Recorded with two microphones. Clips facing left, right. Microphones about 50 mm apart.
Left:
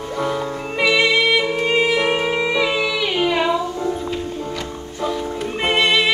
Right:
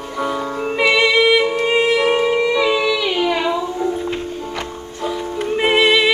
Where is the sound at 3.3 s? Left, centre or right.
Centre.